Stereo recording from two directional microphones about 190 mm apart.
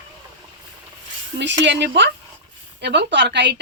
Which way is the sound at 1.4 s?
70° right (ahead or behind).